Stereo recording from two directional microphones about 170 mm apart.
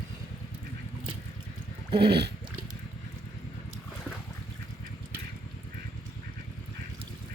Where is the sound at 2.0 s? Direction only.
75° right (ahead or behind).